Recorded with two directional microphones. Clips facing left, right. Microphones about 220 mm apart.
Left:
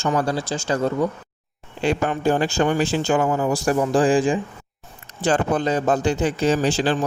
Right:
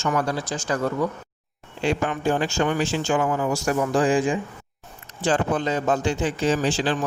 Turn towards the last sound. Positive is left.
turn(degrees=40)  # may be behind; listen again after turning